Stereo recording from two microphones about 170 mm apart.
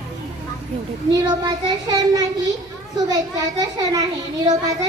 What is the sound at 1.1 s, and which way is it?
A child's voice, 25° right (ahead or behind).